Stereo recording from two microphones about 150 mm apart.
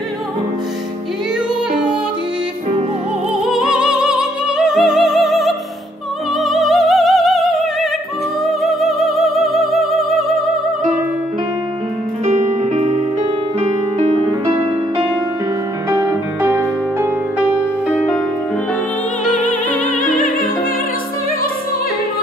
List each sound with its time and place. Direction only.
3.4 s music: 5° right (ahead or behind)
6.4 s opera: centre (ahead or behind)
8.5 s music: centre (ahead or behind)
12.3 s music: 45° right (ahead or behind)
15.9 s music: 20° right (ahead or behind)
17.8 s music: 5° left (ahead or behind)
19.3 s music: 60° left (ahead or behind)